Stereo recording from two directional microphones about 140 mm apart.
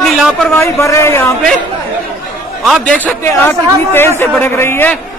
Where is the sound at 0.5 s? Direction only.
20° left (ahead or behind).